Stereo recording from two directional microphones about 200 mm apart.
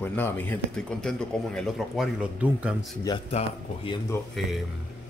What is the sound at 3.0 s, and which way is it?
Speech, 25° left (ahead or behind).